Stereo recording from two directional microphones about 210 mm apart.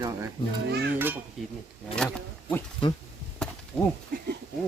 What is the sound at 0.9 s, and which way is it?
Speech, 10° right (ahead or behind).